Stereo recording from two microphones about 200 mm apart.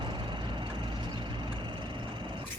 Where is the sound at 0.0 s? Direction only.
25° right (ahead or behind).